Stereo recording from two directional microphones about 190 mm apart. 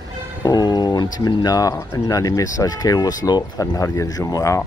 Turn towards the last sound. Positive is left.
turn(degrees=15)  # may be behind; listen again after turning